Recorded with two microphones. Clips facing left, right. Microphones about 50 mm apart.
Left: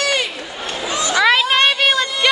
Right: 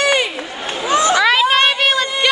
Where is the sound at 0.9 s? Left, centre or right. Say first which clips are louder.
Right 8 dB; right.